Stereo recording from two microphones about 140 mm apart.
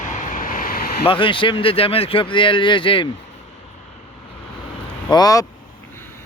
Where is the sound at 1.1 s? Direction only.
40° left (ahead or behind).